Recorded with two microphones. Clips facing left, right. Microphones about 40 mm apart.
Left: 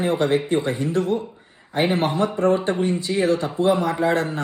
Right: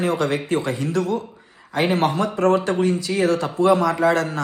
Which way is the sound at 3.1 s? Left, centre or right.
Right.